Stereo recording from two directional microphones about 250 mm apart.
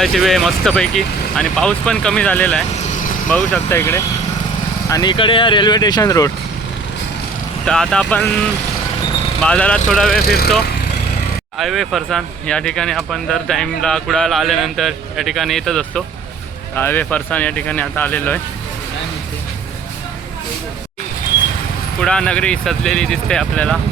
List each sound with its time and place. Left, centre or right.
0.0 s speech: centre
7.6 s speech: centre
10.2 s speech: left
11.5 s speech: centre
22.0 s speech: centre